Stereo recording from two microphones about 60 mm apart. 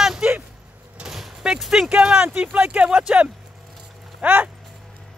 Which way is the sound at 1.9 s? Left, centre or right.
Centre.